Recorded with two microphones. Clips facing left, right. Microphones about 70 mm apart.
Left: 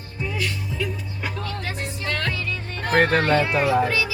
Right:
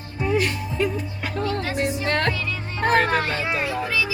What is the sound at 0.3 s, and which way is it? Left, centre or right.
Music, right.